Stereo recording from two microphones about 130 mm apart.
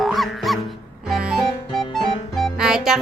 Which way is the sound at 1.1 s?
5° right (ahead or behind).